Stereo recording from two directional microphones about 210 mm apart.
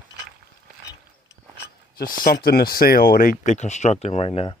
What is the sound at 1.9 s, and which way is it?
Speech, 45° left (ahead or behind).